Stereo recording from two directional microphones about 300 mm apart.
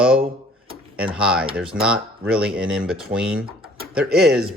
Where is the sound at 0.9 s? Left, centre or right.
Centre.